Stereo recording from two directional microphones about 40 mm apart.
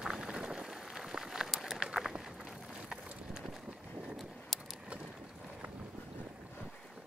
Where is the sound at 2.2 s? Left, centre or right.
Centre.